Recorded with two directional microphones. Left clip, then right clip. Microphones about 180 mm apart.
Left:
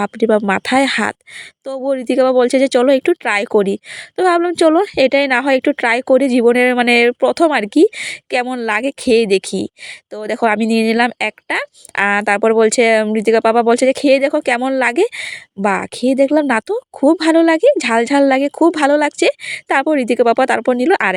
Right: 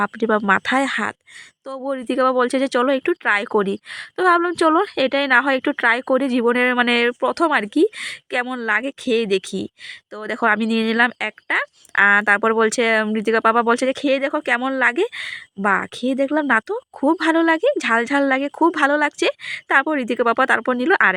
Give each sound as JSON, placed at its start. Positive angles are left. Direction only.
{"t": 0.0, "sound": "speech", "side_deg": 20}